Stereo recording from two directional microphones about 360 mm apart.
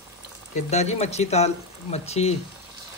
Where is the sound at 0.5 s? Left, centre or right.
Centre.